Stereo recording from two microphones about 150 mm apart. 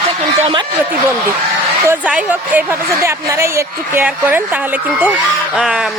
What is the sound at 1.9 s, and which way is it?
A woman's voice, 10° right (ahead or behind).